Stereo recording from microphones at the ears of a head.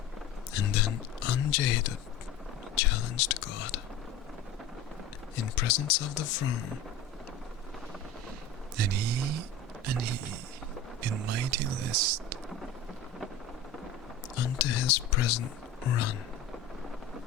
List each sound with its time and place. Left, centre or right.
0.5 s speech: left
5.4 s speech: left
8.7 s speech: right
14.3 s speech: left